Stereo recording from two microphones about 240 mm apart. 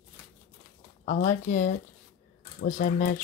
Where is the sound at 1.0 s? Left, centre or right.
Left.